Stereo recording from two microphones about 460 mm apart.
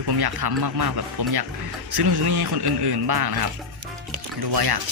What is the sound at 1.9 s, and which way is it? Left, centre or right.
A man's voice, right.